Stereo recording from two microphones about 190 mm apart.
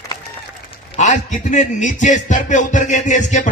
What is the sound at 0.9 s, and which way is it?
Speech, 40° left (ahead or behind).